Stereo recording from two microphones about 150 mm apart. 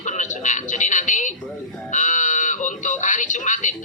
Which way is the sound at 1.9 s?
55° left (ahead or behind).